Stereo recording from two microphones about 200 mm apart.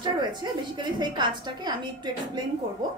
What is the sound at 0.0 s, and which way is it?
A woman's voice, 20° right (ahead or behind).